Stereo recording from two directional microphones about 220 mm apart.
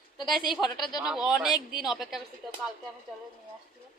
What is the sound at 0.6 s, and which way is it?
Speech, 20° left (ahead or behind).